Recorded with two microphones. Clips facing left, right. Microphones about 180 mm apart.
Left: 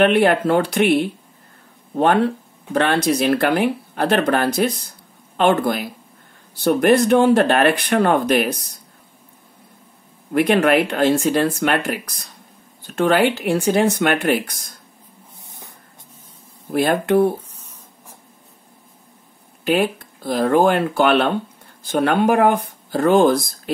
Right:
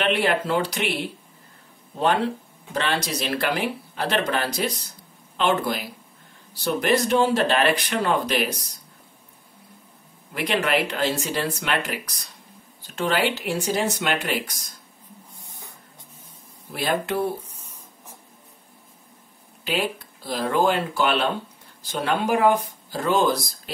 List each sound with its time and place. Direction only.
0.0 s speech: 55° left (ahead or behind)
2.7 s speech: 55° left (ahead or behind)
10.3 s speech: 55° left (ahead or behind)
16.7 s speech: 55° left (ahead or behind)
19.6 s speech: 50° left (ahead or behind)